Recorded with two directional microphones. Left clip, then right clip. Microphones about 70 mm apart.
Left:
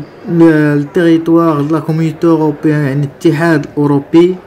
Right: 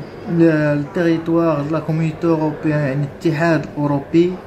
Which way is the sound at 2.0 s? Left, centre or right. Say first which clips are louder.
Left 8 dB; left.